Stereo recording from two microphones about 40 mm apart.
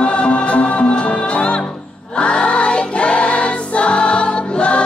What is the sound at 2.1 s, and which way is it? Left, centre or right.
Choir, left.